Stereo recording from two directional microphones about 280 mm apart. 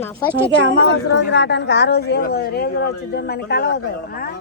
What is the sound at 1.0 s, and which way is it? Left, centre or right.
A woman's voice, left.